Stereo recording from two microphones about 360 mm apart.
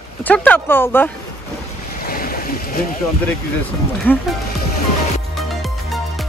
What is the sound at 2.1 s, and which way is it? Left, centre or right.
Boat, left.